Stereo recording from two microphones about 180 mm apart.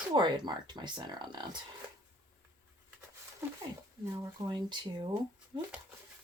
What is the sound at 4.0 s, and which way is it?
Speech, 15° right (ahead or behind).